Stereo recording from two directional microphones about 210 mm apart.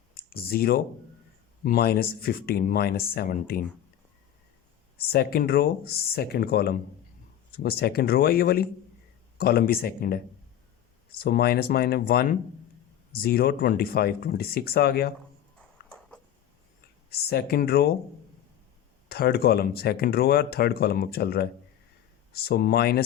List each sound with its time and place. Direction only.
0.2 s speech: 45° left (ahead or behind)
4.9 s speech: 45° left (ahead or behind)
15.9 s a sound: 5° left (ahead or behind)
17.1 s speech: 50° left (ahead or behind)
19.0 s speech: 50° left (ahead or behind)